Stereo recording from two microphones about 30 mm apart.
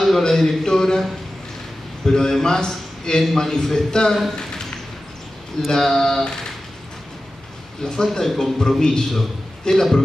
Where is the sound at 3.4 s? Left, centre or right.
Centre.